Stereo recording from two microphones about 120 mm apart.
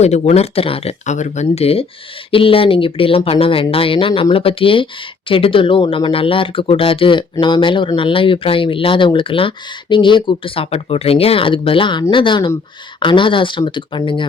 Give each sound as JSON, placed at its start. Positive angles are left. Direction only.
{"t": 0.0, "sound": "speech", "side_deg": 65}
{"t": 1.0, "sound": "speech", "side_deg": 80}